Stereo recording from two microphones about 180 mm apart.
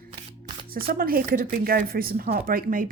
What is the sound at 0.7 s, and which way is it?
Speech, 55° right (ahead or behind).